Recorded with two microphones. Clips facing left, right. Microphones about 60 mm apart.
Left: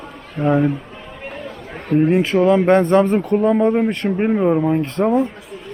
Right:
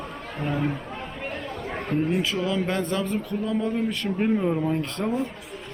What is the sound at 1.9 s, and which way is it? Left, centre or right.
Speech, left.